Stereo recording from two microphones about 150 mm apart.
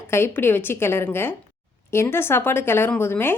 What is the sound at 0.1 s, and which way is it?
Speech, 15° left (ahead or behind).